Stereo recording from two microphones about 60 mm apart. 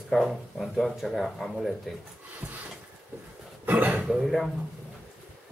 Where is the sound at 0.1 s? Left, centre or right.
Centre.